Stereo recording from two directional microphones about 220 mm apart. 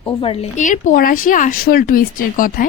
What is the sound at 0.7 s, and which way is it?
A woman's voice, 40° left (ahead or behind).